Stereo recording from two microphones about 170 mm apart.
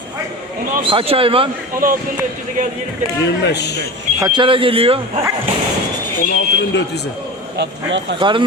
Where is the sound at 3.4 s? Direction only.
80° left.